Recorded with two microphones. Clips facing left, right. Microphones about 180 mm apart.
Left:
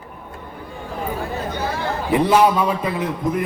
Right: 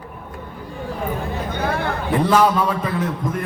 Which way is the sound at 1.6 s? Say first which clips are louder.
Right 3 dB; 60° right (ahead or behind).